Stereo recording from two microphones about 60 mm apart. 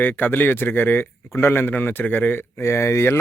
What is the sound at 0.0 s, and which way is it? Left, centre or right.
A man's voice, left.